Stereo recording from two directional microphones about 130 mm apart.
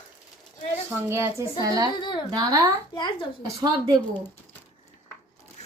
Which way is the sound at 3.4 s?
30° right (ahead or behind).